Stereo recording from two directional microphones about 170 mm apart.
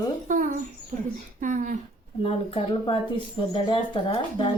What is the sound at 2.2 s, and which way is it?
Speech, 30° left (ahead or behind).